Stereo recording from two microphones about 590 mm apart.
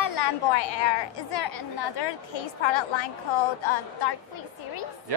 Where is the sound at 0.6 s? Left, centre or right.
Left.